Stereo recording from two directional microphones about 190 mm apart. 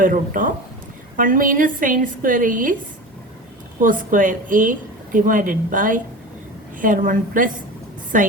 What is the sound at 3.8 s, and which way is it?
A woman's voice, 45° right (ahead or behind).